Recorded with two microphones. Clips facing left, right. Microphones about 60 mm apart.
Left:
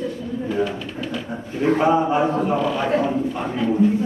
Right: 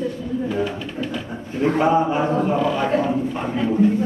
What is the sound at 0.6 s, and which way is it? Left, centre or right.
Speech, centre.